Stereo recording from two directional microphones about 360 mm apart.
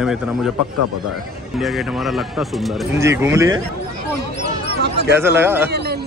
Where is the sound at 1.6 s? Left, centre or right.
Centre.